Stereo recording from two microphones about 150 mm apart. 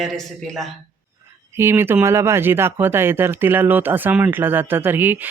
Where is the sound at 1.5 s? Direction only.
15° right (ahead or behind).